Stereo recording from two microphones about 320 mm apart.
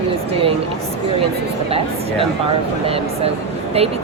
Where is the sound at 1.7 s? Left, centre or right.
Centre.